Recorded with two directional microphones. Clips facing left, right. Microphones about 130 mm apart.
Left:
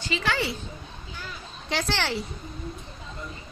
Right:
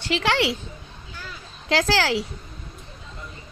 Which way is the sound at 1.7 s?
90° right.